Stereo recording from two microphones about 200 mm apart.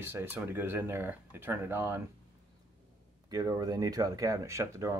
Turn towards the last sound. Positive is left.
turn(degrees=-15)  # may be behind; listen again after turning